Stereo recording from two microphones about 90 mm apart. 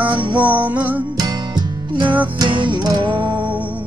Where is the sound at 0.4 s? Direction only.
15° right (ahead or behind).